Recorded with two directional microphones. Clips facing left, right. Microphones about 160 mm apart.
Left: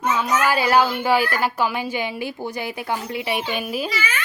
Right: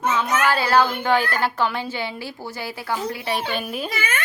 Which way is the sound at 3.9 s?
55° right (ahead or behind).